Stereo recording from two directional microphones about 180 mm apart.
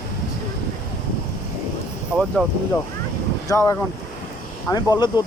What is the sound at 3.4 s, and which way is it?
Speech, 15° left (ahead or behind).